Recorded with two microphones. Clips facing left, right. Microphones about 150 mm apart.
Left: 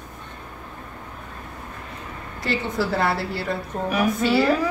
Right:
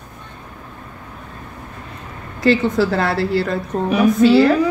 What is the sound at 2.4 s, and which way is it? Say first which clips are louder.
Speech: right 9 dB; 90° right.